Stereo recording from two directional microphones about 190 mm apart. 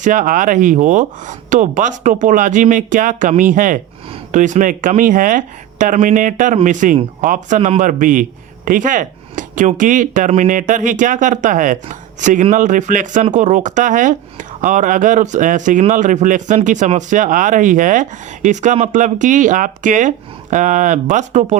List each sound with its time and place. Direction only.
0.0 s a man's voice: 45° right (ahead or behind)